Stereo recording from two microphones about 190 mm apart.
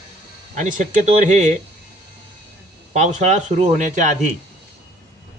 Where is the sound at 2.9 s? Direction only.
40° right (ahead or behind).